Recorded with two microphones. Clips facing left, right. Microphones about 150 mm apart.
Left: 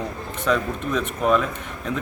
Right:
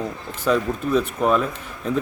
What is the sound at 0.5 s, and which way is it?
Speech, 35° right (ahead or behind).